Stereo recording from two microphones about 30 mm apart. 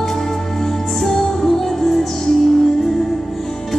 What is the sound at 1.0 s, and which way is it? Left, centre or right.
Music, centre.